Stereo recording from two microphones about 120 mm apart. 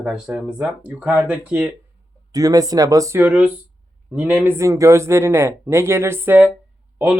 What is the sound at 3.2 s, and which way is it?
Speech, 15° right (ahead or behind).